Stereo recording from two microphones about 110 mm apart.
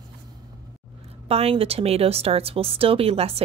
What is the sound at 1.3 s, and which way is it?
Speech, 60° right (ahead or behind).